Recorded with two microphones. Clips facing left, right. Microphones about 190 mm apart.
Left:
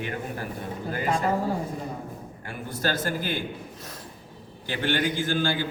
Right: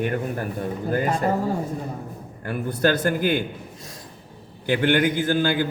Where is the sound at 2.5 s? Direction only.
60° right (ahead or behind).